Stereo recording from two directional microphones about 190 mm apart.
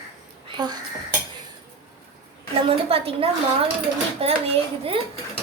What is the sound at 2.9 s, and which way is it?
A woman's voice, 30° right (ahead or behind).